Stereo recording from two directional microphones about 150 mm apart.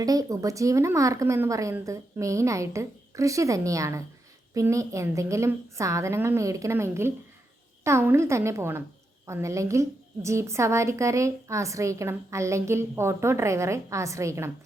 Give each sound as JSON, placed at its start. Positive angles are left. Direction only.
{"t": 0.0, "sound": "a woman's voice", "side_deg": -25}